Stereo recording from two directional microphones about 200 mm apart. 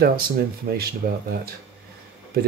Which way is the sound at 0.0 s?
50° right (ahead or behind).